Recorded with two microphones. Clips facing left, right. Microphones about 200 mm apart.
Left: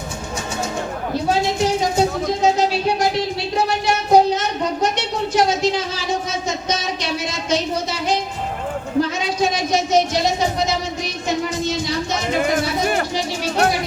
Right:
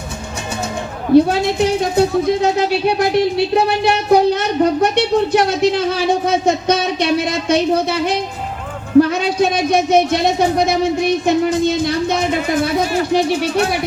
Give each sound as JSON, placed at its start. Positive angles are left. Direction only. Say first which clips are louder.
{"t": 1.1, "sound": "speech", "louder": "right 9 dB", "side_deg": -60}
{"t": 12.8, "sound": "speech", "louder": "right 3 dB", "side_deg": 55}